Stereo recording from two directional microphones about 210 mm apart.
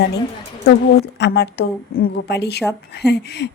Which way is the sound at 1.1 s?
50° left (ahead or behind).